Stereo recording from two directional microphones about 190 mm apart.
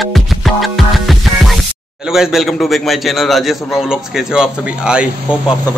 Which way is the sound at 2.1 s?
Centre (ahead or behind).